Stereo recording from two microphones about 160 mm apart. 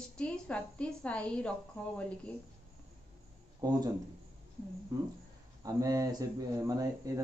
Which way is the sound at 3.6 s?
25° right (ahead or behind).